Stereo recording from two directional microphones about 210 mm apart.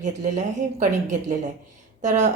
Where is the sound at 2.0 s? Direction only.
35° right (ahead or behind).